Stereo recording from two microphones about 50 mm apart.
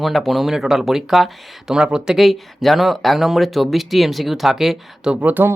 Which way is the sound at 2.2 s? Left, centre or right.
Centre.